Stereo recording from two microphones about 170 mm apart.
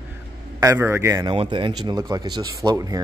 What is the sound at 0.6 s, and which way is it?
Speech, 15° right (ahead or behind).